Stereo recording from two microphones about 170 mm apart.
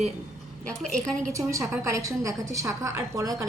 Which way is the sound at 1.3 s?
20° right (ahead or behind).